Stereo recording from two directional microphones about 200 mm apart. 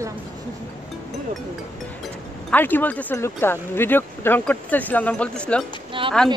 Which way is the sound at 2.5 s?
10° left (ahead or behind).